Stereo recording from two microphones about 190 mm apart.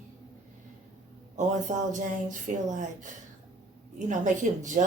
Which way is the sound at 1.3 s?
40° right (ahead or behind).